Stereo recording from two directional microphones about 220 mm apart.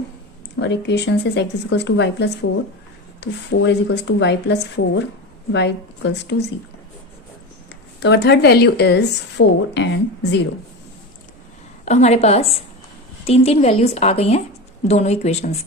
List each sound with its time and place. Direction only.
0.6 s speech: 50° left (ahead or behind)
8.0 s speech: 50° left (ahead or behind)
11.9 s a woman's voice: 30° left (ahead or behind)